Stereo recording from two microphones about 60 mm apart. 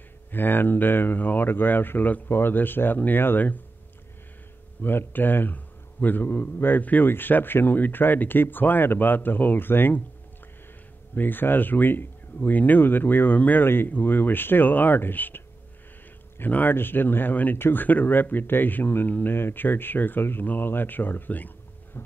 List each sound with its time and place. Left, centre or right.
0.3 s speech: left
4.8 s speech: left
11.1 s speech: left